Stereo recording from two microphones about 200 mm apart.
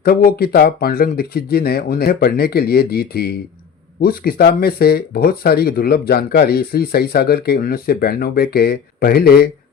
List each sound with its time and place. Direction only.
0.0 s speech: 50° left (ahead or behind)